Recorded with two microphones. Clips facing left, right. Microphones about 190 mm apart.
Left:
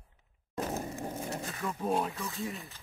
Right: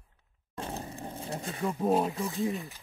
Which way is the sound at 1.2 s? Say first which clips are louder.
Right 3 dB; 30° right (ahead or behind).